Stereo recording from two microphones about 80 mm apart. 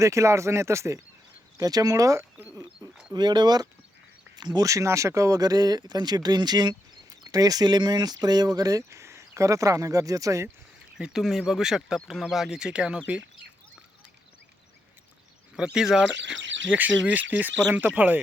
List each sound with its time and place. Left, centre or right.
0.0 s speech: right
1.5 s speech: right
3.1 s speech: right
4.6 s speech: right
10.9 s speech: centre
15.5 s speech: centre
16.7 s speech: centre